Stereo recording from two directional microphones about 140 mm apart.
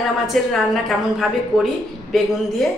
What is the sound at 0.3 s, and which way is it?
A woman's voice, centre (ahead or behind).